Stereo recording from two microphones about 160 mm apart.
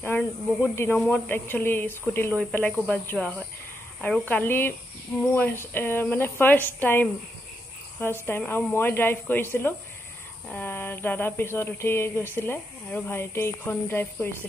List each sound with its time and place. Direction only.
0.0 s speech: 15° left (ahead or behind)
8.3 s speech: 15° left (ahead or behind)